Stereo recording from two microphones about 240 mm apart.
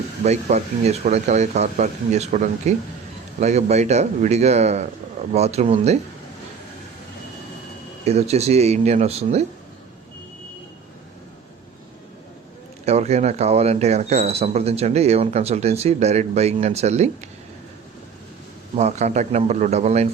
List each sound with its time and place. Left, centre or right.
0.3 s speech: right
8.0 s speech: right
12.8 s speech: right
18.8 s speech: right